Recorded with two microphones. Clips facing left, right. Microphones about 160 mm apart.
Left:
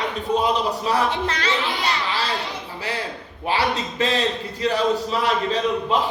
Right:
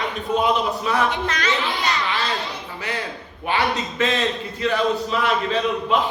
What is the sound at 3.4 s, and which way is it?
A man's voice, 35° left (ahead or behind).